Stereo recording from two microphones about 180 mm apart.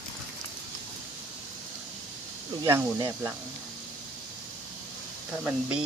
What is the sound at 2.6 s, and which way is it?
Speech, 15° right (ahead or behind).